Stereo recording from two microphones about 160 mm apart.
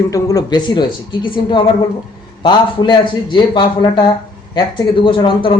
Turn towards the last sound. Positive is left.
turn(degrees=30)  # may be behind; listen again after turning